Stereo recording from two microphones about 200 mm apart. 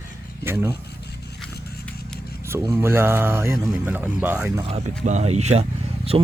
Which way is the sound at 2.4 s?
15° right (ahead or behind).